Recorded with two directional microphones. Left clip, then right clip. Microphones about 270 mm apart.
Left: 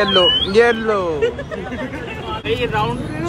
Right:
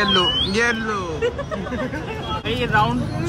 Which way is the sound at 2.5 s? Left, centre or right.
Right.